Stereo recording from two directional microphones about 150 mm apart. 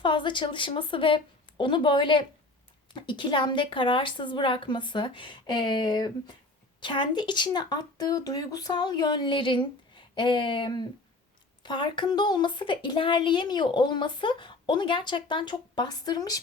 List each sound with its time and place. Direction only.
0.0 s a woman's voice: 30° left (ahead or behind)